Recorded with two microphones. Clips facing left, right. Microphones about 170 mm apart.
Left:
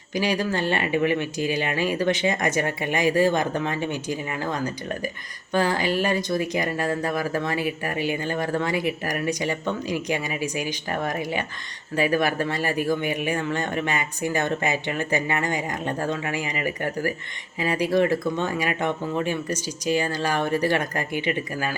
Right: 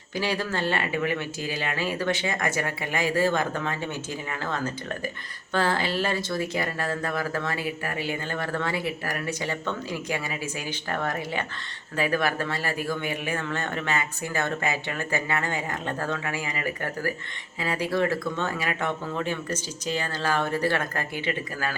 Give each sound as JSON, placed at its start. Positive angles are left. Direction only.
{"t": 0.1, "sound": "speech", "side_deg": 15}